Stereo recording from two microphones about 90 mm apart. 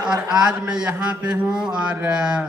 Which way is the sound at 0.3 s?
10° right (ahead or behind).